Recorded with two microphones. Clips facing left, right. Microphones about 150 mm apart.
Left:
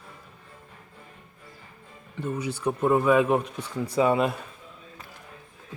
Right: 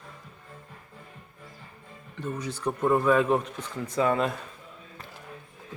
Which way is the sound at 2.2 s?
10° left (ahead or behind).